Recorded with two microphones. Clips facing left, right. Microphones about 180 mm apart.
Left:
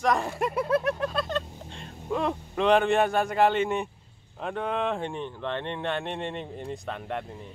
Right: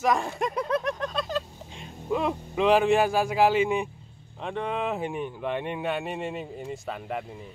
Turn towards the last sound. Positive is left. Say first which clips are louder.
# even
turn(degrees=-5)  # may be behind; listen again after turning